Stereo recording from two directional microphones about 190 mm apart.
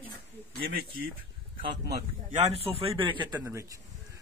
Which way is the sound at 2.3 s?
30° right (ahead or behind).